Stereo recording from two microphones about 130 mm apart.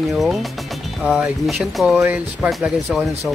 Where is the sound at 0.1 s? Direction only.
Centre (ahead or behind).